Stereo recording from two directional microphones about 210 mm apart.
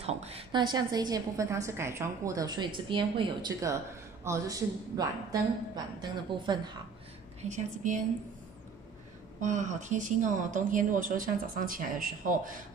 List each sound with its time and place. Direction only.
0.0 s a woman's voice: 30° right (ahead or behind)
7.4 s a woman's voice: 35° right (ahead or behind)
9.4 s a woman's voice: 35° right (ahead or behind)